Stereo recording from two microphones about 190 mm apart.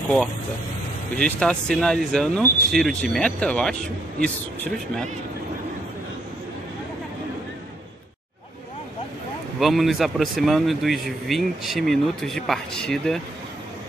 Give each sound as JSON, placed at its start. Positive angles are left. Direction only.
{"t": 1.1, "sound": "speech", "side_deg": 5}
{"t": 9.6, "sound": "speech", "side_deg": 0}